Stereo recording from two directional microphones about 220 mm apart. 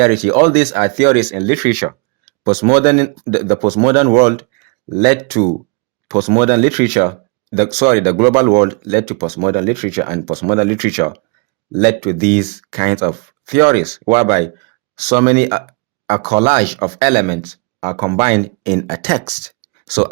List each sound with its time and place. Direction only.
0.0 s speech: 35° right (ahead or behind)